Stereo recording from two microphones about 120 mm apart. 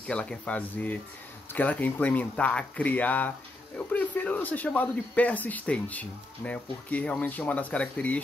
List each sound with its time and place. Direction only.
0.0 s speech: 10° left (ahead or behind)